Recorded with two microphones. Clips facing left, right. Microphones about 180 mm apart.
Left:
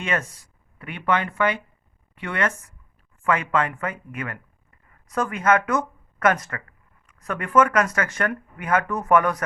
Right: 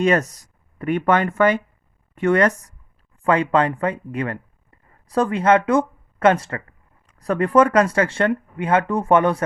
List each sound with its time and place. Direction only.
0.0 s speech: 40° right (ahead or behind)